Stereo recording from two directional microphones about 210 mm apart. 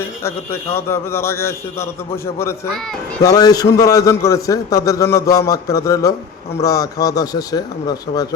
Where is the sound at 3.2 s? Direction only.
15° left (ahead or behind).